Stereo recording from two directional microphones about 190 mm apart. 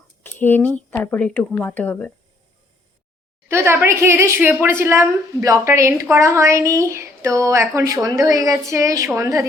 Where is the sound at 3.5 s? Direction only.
15° right (ahead or behind).